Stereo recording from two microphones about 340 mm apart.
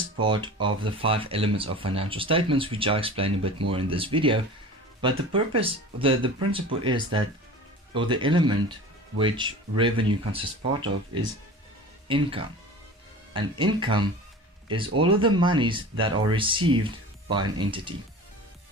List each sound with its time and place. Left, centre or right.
0.2 s speech: centre